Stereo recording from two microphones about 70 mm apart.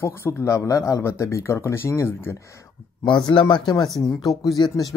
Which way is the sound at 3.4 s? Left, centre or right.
Left.